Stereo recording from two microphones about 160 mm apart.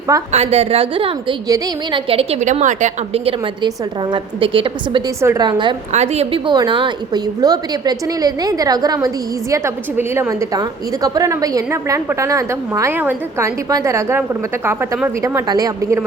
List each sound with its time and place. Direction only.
0.3 s a woman's voice: 40° right (ahead or behind)
1.5 s a woman's voice: 25° right (ahead or behind)
2.0 s a woman's voice: 40° right (ahead or behind)
3.2 s a woman's voice: 30° right (ahead or behind)
5.2 s a woman's voice: 15° right (ahead or behind)
5.5 s a woman's voice: 30° right (ahead or behind)
5.9 s a woman's voice: 45° right (ahead or behind); by 16.0 s 20° right (ahead or behind)